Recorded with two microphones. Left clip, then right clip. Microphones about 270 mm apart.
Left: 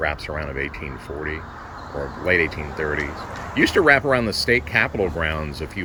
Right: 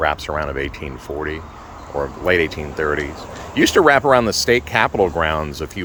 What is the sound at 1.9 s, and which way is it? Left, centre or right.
Speech, right.